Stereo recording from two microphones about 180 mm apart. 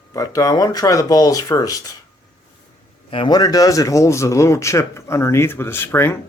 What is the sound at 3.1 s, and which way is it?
Speech, 25° left (ahead or behind).